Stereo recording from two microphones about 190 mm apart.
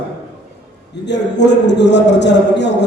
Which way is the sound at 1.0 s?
65° left (ahead or behind).